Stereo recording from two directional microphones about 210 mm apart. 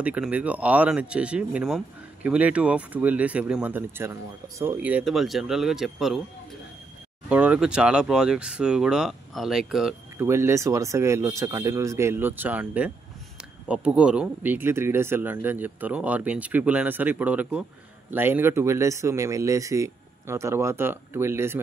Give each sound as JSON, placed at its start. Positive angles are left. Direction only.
{"t": 0.0, "sound": "speech", "side_deg": -5}
{"t": 7.2, "sound": "speech", "side_deg": -5}
{"t": 10.2, "sound": "speech", "side_deg": -15}